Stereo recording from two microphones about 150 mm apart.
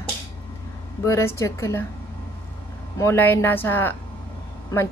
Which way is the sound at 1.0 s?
20° left (ahead or behind).